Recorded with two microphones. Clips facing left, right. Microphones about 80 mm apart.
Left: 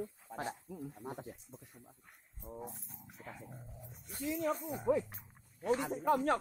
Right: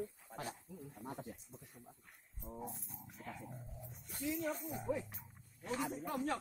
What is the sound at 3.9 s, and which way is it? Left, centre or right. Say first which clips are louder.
Speech: left 4 dB; centre.